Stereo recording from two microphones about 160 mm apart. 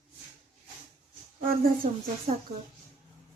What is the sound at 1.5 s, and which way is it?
Speech, 65° right (ahead or behind).